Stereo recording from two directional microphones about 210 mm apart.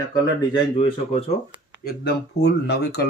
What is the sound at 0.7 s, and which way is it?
Speech, 30° left (ahead or behind).